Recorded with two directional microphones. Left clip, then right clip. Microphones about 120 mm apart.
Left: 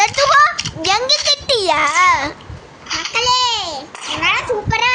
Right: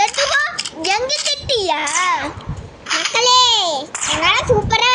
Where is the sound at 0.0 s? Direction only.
40° left (ahead or behind).